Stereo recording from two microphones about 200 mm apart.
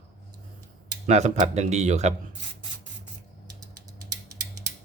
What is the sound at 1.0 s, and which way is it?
Speech, 35° right (ahead or behind).